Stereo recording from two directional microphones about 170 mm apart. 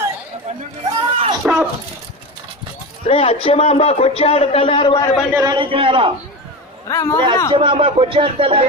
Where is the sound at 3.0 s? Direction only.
35° left (ahead or behind).